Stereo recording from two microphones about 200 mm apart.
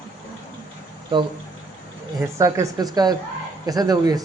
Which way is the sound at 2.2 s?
15° right (ahead or behind).